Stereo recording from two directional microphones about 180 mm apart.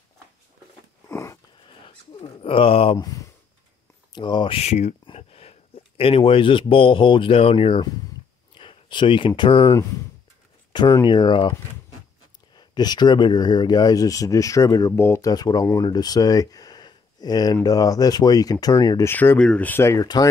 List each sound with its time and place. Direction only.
1.0 s biting: 15° left (ahead or behind)
1.7 s speech: 30° left (ahead or behind)
3.0 s speech: 20° left (ahead or behind)
8.5 s a sound: 25° left (ahead or behind)
9.3 s speech: 20° left (ahead or behind)
12.5 s speech: 25° left (ahead or behind)